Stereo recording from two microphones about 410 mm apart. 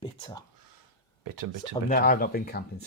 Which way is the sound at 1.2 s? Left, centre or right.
Right.